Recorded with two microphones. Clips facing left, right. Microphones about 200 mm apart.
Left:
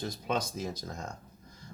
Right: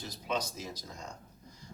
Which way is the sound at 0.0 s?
50° left (ahead or behind).